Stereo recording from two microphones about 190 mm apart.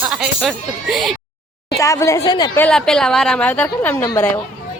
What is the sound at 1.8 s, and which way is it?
Speech, 15° left (ahead or behind).